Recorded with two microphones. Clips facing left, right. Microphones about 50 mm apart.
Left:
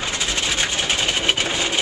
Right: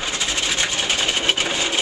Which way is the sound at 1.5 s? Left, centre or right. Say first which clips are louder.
Even; centre.